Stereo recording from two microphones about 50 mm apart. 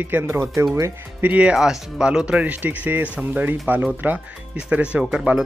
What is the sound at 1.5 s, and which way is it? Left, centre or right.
Speech, centre.